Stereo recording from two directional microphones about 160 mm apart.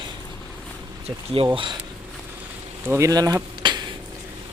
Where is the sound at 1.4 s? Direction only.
35° right (ahead or behind).